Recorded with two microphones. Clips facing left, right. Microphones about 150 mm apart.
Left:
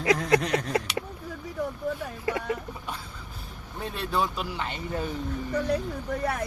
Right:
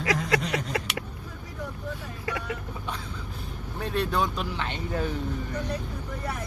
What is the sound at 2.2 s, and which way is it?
Vehicle, 25° left (ahead or behind).